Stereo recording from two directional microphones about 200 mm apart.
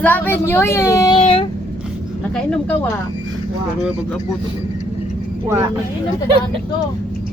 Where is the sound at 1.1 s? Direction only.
30° left (ahead or behind).